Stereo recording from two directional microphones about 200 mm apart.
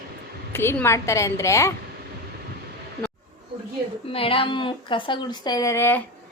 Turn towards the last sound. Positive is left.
turn(degrees=10)  # may be behind; listen again after turning